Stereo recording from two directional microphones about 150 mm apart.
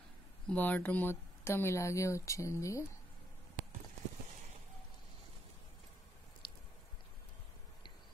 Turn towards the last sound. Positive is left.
turn(degrees=35)  # may be behind; listen again after turning